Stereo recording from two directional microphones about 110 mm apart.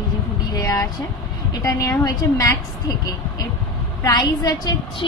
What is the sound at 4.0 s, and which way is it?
Speech, 40° left (ahead or behind).